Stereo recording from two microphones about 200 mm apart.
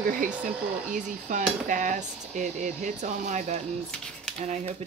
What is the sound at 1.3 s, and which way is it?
Speech, 40° right (ahead or behind).